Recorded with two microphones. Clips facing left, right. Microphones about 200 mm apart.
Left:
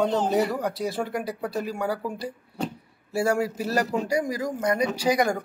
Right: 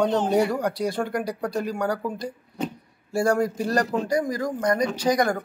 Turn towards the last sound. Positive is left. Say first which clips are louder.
# right 1 dB
turn(degrees=10)  # may be behind; listen again after turning